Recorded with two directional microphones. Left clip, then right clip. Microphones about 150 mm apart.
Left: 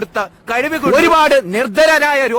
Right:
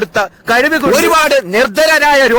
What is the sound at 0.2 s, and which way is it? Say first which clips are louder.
Speech: right 6 dB; 25° right (ahead or behind).